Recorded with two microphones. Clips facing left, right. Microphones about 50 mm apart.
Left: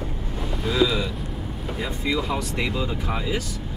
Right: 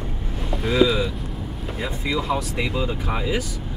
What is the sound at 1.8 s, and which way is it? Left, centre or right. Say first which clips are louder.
Speech: right 1 dB; centre.